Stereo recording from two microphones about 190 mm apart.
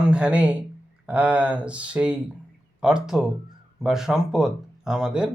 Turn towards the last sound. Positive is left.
turn(degrees=-5)  # may be behind; listen again after turning